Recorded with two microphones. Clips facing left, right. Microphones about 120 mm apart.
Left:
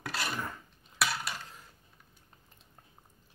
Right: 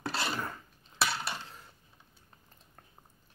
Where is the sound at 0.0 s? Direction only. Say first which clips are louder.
Right 2 dB; 30° right (ahead or behind).